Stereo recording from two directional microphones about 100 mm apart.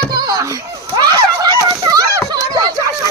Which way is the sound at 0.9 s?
40° right (ahead or behind).